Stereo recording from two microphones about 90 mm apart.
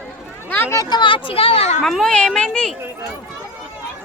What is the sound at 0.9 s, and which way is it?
Speech, 60° left (ahead or behind).